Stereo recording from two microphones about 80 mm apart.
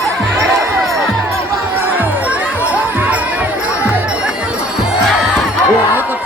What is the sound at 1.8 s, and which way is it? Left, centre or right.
Crowd, right.